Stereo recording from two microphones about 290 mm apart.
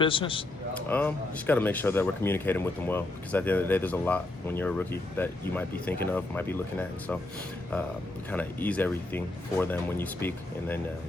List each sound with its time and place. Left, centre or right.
0.0 s speech: centre
0.9 s speech: centre
8.3 s speech: centre